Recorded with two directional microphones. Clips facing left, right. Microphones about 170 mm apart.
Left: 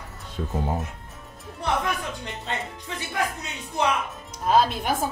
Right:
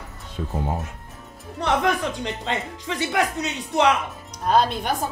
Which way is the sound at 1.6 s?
85° right.